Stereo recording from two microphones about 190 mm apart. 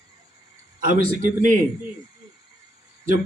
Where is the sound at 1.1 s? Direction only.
45° right (ahead or behind).